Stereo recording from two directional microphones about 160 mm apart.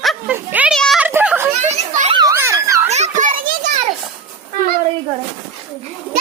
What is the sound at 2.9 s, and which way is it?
Children playing, 50° right (ahead or behind).